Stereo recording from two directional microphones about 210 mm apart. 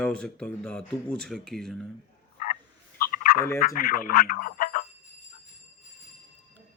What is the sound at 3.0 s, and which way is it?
Fowl, 45° left (ahead or behind).